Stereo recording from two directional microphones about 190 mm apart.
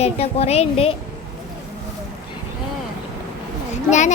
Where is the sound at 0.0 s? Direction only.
35° left (ahead or behind).